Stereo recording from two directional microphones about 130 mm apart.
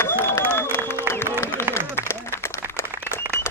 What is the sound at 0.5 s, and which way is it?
Applause, 20° left (ahead or behind).